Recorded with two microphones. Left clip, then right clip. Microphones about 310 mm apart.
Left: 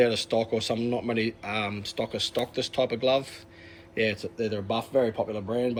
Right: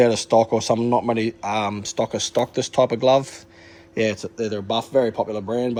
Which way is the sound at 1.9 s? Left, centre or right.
Right.